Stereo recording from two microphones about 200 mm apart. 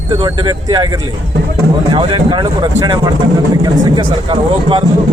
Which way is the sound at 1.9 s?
25° right (ahead or behind).